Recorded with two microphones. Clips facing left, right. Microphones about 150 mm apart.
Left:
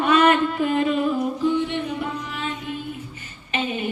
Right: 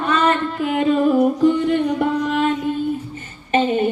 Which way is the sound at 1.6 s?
55° right (ahead or behind).